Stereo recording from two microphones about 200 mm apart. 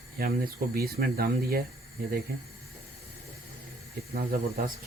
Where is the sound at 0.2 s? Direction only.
50° right (ahead or behind).